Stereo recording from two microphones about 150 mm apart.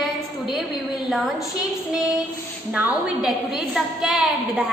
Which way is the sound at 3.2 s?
5° right (ahead or behind).